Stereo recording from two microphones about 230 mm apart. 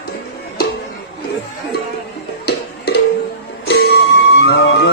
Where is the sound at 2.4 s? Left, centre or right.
Left.